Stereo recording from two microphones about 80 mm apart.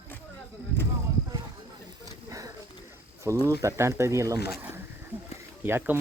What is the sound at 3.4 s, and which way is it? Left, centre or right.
Speech, right.